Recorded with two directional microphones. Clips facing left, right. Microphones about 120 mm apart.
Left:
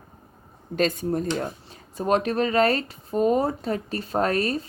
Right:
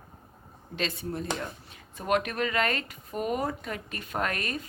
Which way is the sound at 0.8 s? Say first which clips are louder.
Left 9 dB; 45° left (ahead or behind).